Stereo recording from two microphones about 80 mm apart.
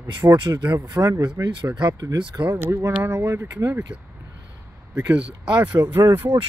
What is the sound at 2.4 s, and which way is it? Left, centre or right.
Speech, right.